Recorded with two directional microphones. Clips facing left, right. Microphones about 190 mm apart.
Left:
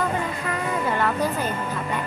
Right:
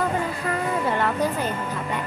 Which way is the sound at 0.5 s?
30° right (ahead or behind).